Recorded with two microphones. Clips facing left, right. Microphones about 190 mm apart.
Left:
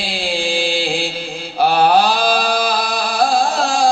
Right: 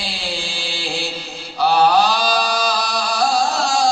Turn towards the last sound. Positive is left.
turn(degrees=55)  # may be behind; listen again after turning